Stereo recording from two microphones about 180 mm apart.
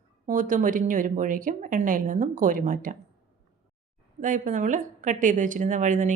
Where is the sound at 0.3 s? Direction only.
45° right (ahead or behind).